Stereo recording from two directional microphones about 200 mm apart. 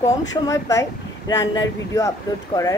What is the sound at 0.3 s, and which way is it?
Speech, 15° left (ahead or behind).